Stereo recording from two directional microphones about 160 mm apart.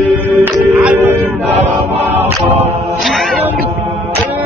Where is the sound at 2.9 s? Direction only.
Centre (ahead or behind).